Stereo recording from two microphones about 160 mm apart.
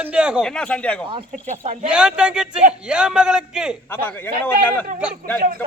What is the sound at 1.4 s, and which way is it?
Speech, 50° right (ahead or behind).